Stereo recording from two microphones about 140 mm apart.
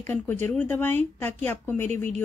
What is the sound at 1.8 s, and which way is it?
Speech, 55° right (ahead or behind).